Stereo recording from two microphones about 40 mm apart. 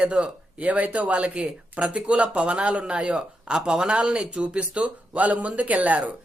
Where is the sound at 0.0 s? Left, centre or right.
Right.